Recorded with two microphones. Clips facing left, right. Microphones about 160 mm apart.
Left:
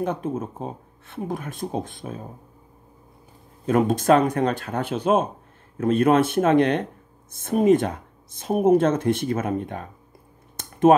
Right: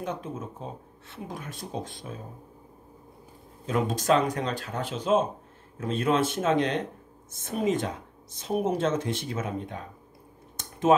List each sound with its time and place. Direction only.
0.0 s speech: 55° left (ahead or behind)
3.6 s speech: 55° left (ahead or behind)
10.6 s a sound: 55° left (ahead or behind)